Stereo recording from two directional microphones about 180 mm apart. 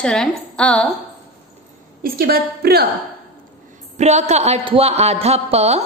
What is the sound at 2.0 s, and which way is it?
Speech, 60° right (ahead or behind).